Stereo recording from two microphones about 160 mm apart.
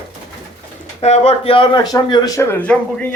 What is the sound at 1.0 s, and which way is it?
Speech, 40° left (ahead or behind).